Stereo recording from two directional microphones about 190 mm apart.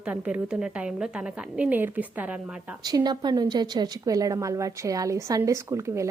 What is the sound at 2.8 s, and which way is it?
A woman's voice, 20° right (ahead or behind).